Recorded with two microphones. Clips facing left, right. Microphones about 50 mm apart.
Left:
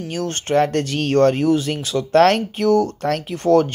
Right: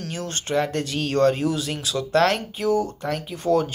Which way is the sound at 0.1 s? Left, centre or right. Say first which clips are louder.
Left 6 dB; left.